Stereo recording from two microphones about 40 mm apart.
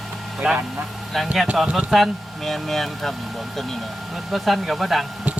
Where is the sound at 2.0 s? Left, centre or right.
Centre.